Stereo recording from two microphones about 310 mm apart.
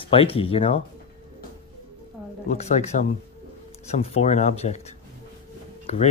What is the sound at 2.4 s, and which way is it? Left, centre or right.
Speech, left.